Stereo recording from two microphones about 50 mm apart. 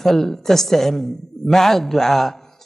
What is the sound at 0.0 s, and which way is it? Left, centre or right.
Speech, centre.